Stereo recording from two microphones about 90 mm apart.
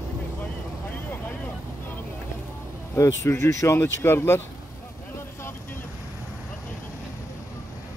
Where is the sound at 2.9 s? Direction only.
35° left (ahead or behind).